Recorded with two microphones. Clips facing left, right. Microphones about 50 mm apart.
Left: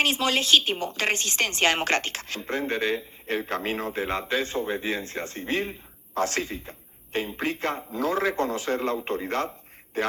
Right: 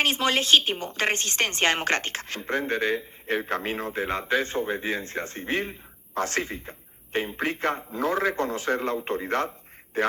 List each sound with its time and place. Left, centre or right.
0.0 s a man's voice: right